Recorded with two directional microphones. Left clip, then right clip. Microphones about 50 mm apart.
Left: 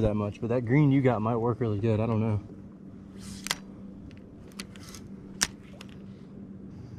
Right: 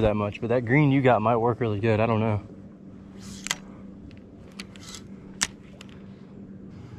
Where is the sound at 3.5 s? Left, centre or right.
Centre.